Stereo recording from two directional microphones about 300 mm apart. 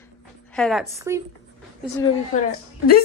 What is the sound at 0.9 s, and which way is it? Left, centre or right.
Speech, centre.